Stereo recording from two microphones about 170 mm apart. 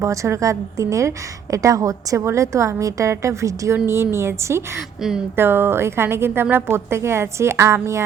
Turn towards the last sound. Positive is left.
turn(degrees=-15)  # may be behind; listen again after turning